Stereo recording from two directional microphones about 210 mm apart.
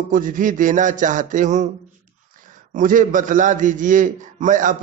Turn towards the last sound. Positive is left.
turn(degrees=-35)  # may be behind; listen again after turning